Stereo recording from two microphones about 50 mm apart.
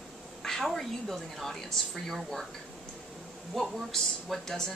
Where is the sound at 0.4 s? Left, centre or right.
Centre.